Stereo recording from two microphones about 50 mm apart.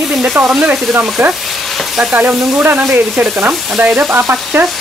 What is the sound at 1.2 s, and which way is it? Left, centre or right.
Speech, right.